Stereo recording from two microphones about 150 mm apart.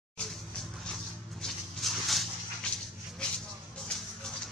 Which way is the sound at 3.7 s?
5° left (ahead or behind).